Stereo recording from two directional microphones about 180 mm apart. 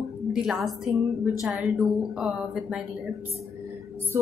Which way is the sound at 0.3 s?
Centre (ahead or behind).